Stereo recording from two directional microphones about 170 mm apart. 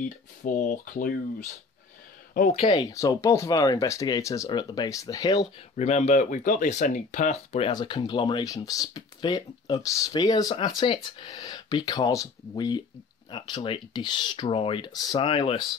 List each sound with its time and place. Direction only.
0.4 s speech: 50° left (ahead or behind)
2.5 s speech: 30° left (ahead or behind)
5.8 s speech: 40° left (ahead or behind)
7.7 s speech: 25° left (ahead or behind)